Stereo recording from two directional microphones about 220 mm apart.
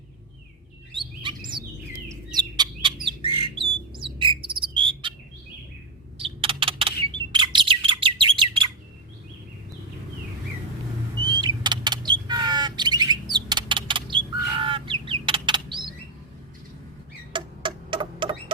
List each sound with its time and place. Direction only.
0.9 s chirp: 20° right (ahead or behind)
2.0 s bird: 20° right (ahead or behind)
6.1 s a sound: 25° right (ahead or behind)
7.3 s bird: 20° right (ahead or behind)
11.2 s a sound: 20° right (ahead or behind)
14.5 s bird: 25° right (ahead or behind)
17.3 s rodents: 20° right (ahead or behind)